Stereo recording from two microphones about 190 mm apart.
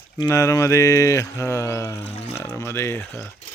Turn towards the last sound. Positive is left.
turn(degrees=15)  # may be behind; listen again after turning